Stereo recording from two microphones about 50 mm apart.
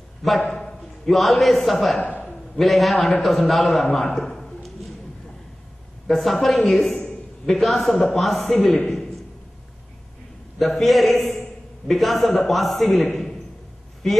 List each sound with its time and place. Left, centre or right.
0.4 s a man's voice: centre
6.0 s a man's voice: centre
8.5 s a man's voice: centre
10.6 s a man's voice: centre